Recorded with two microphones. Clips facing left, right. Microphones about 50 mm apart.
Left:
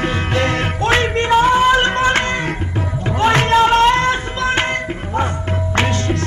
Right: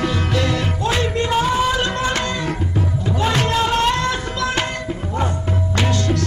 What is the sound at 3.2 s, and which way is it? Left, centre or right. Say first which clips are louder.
Music: left 7 dB; left.